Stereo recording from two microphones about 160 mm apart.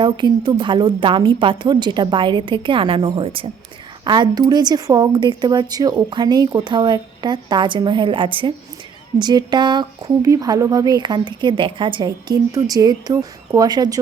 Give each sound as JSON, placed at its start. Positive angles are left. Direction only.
{"t": 0.0, "sound": "a woman's voice", "side_deg": -30}